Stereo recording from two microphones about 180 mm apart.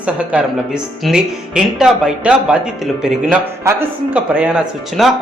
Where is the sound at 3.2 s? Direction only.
15° right (ahead or behind).